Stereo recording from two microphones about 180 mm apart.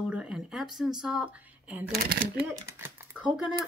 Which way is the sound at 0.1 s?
5° right (ahead or behind).